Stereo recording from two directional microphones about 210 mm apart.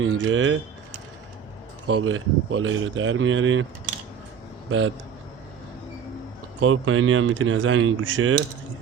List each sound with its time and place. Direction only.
0.0 s speech: 70° right (ahead or behind)
1.9 s speech: 80° right
6.6 s speech: 75° right (ahead or behind)